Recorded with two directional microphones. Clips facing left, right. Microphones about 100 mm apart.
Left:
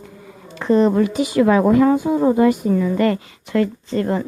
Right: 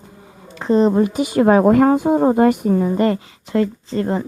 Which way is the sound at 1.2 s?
40° right (ahead or behind).